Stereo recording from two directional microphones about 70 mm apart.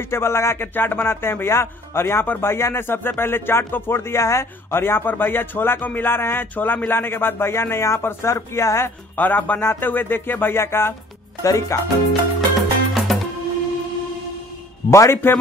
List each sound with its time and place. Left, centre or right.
0.1 s speech: left
0.7 s speech: left
9.1 s speech: left
11.4 s music: left
12.1 s music: centre
14.9 s speech: left